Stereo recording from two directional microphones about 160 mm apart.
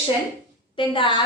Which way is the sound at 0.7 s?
30° left (ahead or behind).